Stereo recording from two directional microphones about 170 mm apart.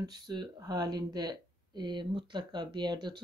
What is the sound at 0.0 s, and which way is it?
Speech, 25° right (ahead or behind).